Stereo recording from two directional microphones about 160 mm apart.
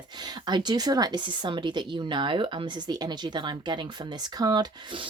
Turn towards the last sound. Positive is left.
turn(degrees=-30)  # may be behind; listen again after turning